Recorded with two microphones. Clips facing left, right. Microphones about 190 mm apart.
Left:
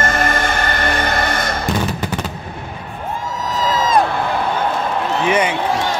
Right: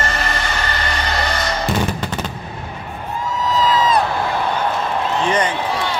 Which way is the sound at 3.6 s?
45° left (ahead or behind).